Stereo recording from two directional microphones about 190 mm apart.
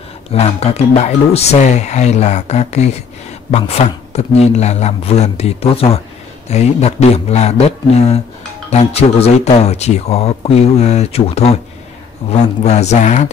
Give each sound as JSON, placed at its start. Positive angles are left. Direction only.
{"t": 0.3, "sound": "speech", "side_deg": 35}